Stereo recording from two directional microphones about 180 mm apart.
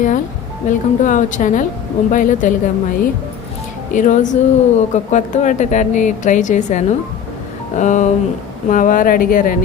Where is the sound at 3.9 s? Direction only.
45° left (ahead or behind).